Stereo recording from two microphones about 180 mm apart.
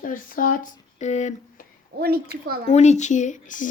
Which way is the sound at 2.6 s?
40° left (ahead or behind).